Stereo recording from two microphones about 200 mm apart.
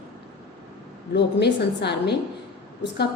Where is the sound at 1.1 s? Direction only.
60° left (ahead or behind).